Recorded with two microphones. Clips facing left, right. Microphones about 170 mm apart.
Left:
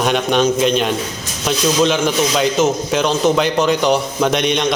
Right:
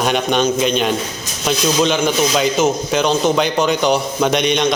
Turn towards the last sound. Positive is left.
turn(degrees=0)  # may be behind; listen again after turning